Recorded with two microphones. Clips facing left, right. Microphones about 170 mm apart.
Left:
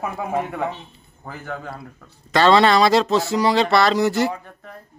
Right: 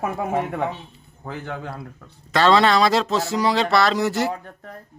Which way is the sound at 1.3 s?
20° right (ahead or behind).